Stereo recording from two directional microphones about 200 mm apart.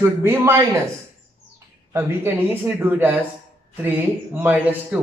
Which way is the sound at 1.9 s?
10° right (ahead or behind).